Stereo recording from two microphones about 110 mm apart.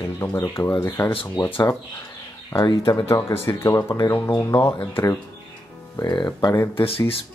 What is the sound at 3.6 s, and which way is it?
Speech, 25° left (ahead or behind).